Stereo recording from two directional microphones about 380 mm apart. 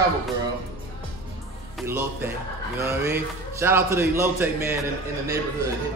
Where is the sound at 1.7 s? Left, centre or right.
Centre.